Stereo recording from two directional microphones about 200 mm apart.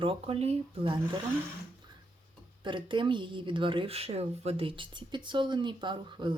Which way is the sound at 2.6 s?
25° right (ahead or behind).